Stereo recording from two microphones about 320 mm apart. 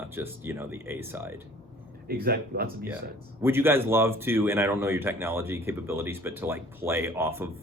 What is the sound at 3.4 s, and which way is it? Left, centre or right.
Speech, centre.